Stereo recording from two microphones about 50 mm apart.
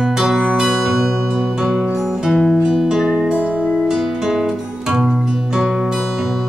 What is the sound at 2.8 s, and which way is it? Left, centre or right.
Music, centre.